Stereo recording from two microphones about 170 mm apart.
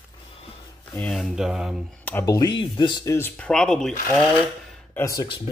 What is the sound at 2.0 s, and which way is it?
Speech, 10° left (ahead or behind).